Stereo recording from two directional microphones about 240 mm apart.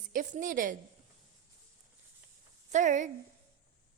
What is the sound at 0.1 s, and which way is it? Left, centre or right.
Speech, right.